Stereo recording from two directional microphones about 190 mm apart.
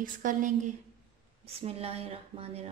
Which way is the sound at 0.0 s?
45° right (ahead or behind).